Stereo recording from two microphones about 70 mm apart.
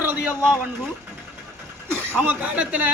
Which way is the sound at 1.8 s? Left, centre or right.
Right.